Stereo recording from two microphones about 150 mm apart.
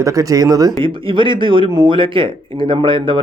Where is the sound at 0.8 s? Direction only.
35° right (ahead or behind).